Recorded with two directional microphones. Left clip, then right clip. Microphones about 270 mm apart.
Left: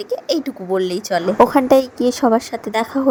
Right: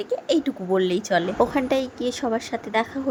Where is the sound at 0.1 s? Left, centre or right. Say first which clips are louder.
Left 2 dB; left.